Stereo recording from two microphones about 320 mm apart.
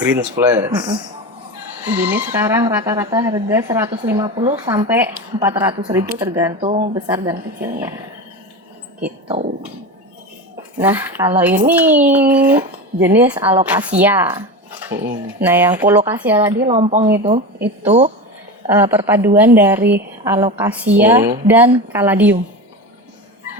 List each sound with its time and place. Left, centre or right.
0.1 s speech: centre
2.0 s speech: centre
6.7 s speech: centre
7.1 s speech: centre
9.2 s speech: centre
10.8 s speech: centre
16.6 s speech: right
18.7 s speech: centre